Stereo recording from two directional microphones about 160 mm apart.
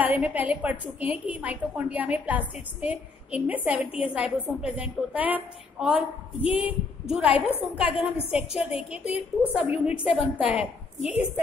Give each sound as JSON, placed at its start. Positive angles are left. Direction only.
{"t": 0.0, "sound": "a woman's voice", "side_deg": -10}
{"t": 5.9, "sound": "a woman's voice", "side_deg": 35}
{"t": 6.6, "sound": "a woman's voice", "side_deg": -10}
{"t": 9.8, "sound": "a woman's voice", "side_deg": -5}